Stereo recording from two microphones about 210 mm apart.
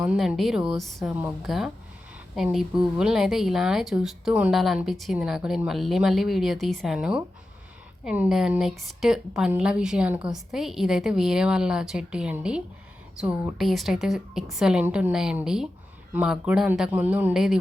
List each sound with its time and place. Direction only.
0.0 s speech: 5° right (ahead or behind)